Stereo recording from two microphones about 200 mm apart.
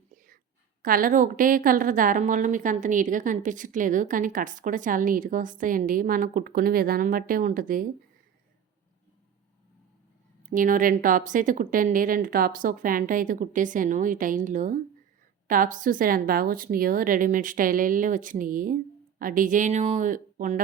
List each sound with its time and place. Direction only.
0.8 s a woman's voice: 45° right (ahead or behind)
10.5 s a woman's voice: 40° right (ahead or behind)